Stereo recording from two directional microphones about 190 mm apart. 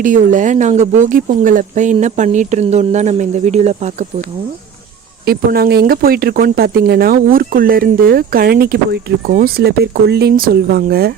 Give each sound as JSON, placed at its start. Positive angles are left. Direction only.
{"t": 0.0, "sound": "speech", "side_deg": -40}
{"t": 5.2, "sound": "speech", "side_deg": -50}